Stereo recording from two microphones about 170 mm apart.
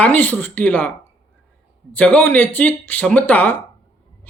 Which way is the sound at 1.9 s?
10° left (ahead or behind).